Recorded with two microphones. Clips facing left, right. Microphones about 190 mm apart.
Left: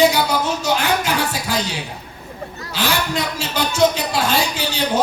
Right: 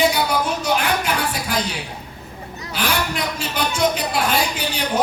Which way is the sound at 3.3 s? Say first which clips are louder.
Left 6 dB; 25° left (ahead or behind).